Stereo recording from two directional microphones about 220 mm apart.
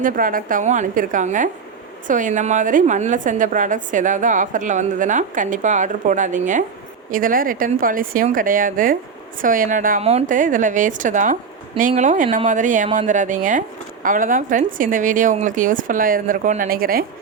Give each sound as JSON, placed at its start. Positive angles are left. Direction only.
{"t": 0.0, "sound": "speech", "side_deg": -40}